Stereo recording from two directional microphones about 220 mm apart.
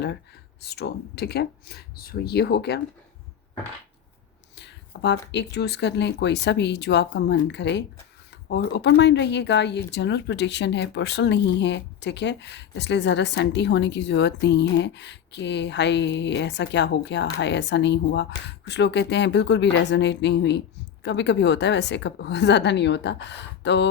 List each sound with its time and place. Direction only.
0.6 s speech: 45° left (ahead or behind)
4.5 s a sound: 50° left (ahead or behind)
5.3 s speech: 50° left (ahead or behind)